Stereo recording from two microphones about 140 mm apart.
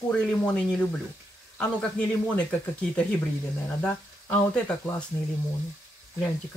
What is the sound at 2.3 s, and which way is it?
Speech, 10° left (ahead or behind).